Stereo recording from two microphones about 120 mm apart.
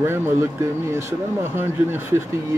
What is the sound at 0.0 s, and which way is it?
A man's voice, 20° right (ahead or behind).